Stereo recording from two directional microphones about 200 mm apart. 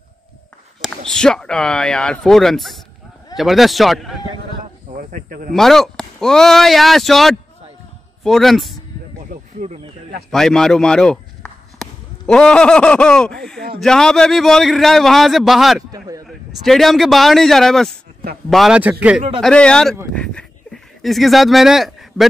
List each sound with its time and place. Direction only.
0.7 s speech: centre (ahead or behind)
5.1 s speech: 45° right (ahead or behind)
5.5 s speech: centre (ahead or behind)
9.3 s a sound: 35° right (ahead or behind)
10.3 s speech: centre (ahead or behind)
19.4 s speech: 5° left (ahead or behind)